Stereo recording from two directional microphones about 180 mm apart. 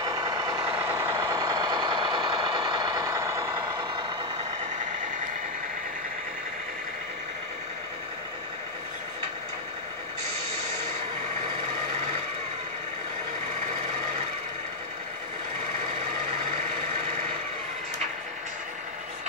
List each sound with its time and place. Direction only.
0.0 s vehicle: 20° right (ahead or behind)